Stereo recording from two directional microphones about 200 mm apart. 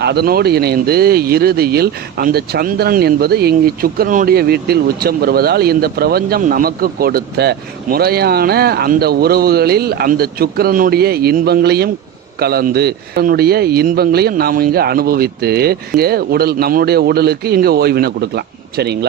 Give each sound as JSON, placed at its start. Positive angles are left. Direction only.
{"t": 0.0, "sound": "speech", "side_deg": -55}